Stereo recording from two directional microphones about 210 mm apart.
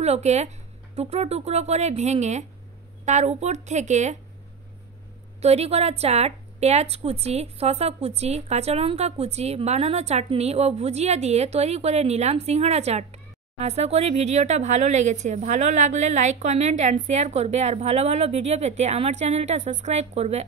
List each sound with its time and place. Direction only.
0.0 s a woman's voice: 30° right (ahead or behind)
5.4 s a woman's voice: 30° right (ahead or behind)